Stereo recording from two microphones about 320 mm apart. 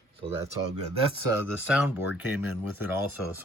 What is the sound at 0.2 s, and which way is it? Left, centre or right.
Speech, centre.